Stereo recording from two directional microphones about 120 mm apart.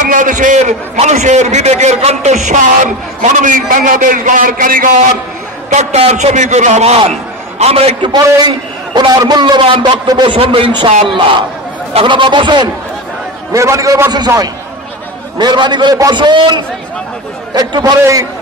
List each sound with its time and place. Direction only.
0.0 s a man's voice: 90° right
5.7 s a man's voice: 70° right (ahead or behind)
8.1 s a man's voice: 35° right (ahead or behind)
13.5 s a man's voice: 25° right (ahead or behind)
15.3 s a man's voice: 40° right (ahead or behind)